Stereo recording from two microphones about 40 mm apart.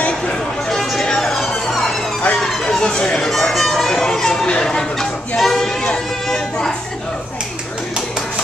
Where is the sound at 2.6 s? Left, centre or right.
Left.